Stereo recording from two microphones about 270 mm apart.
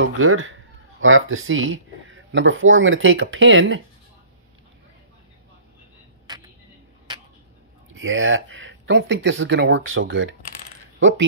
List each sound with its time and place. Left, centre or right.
0.0 s speech: right
7.9 s speech: right